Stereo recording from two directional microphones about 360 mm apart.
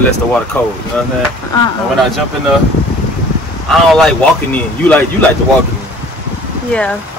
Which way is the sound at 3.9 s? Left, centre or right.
Centre.